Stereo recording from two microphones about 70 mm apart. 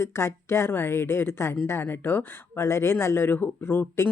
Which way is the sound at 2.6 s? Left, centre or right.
Left.